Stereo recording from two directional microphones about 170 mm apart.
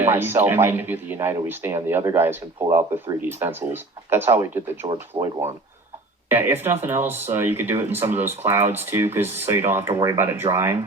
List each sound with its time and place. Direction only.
0.0 s speech: 15° right (ahead or behind)
5.1 s speech: 35° right (ahead or behind)
6.2 s speech: 15° right (ahead or behind)